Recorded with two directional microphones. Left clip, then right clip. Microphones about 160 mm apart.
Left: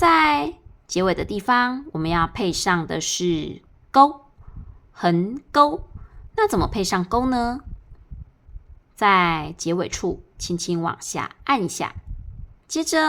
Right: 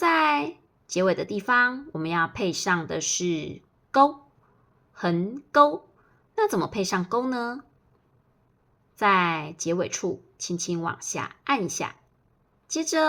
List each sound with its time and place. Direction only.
0.0 s a sound: 25° left (ahead or behind)
0.9 s speech: 25° left (ahead or behind)
9.0 s speech: 25° left (ahead or behind)
12.7 s speech: 25° left (ahead or behind)